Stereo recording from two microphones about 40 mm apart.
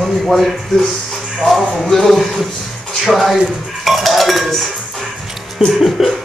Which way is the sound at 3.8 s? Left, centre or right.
Centre.